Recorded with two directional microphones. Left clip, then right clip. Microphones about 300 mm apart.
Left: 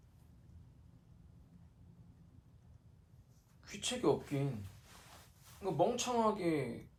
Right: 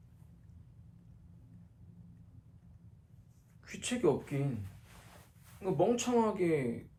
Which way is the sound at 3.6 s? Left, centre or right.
Centre.